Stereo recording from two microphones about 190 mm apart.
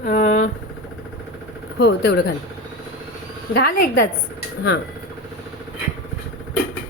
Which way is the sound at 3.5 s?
50° left (ahead or behind).